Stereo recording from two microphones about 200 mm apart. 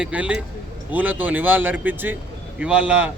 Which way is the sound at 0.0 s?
5° right (ahead or behind).